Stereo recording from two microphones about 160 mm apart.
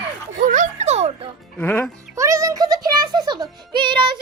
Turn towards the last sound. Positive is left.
turn(degrees=-30)  # may be behind; listen again after turning